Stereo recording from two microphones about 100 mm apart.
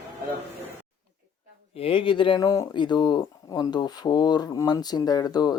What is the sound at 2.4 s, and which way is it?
Speech, 35° left (ahead or behind).